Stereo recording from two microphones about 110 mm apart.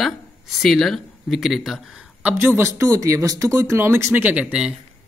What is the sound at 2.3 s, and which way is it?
Speech, 20° right (ahead or behind).